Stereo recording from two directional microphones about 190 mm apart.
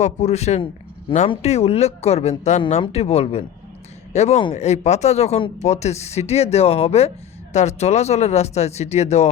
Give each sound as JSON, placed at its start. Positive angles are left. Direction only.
{"t": 0.0, "sound": "speech", "side_deg": 35}